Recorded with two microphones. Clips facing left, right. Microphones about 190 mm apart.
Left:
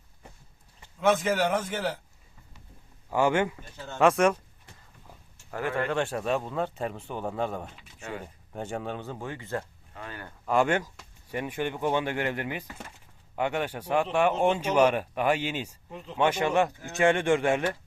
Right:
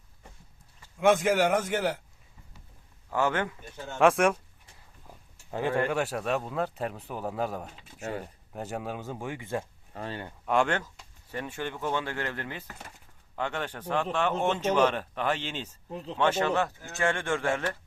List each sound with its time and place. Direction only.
0.9 s speech: 10° right (ahead or behind)
3.1 s speech: 15° left (ahead or behind)
3.9 s speech: centre (ahead or behind)
5.5 s speech: 20° right (ahead or behind)
7.8 s a sound: 35° right (ahead or behind)
8.5 s speech: 5° right (ahead or behind)
9.9 s speech: 30° right (ahead or behind)
10.4 s speech: 5° left (ahead or behind)
15.9 s speech: 35° right (ahead or behind)
16.1 s speech: 10° left (ahead or behind)